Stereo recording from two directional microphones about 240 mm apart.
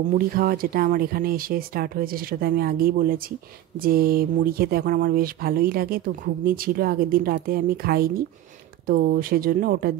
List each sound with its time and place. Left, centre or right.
0.0 s speech: right